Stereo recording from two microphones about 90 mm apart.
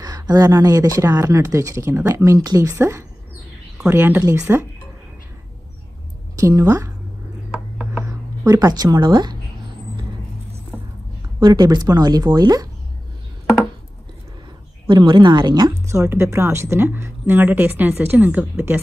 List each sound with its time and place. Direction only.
0.0 s a woman's voice: 45° right (ahead or behind)
6.3 s speech: 35° right (ahead or behind)
8.0 s speech: 40° right (ahead or behind)
11.3 s speech: 50° right (ahead or behind)
14.9 s a woman's voice: 55° right (ahead or behind)
15.9 s a woman's voice: 30° right (ahead or behind)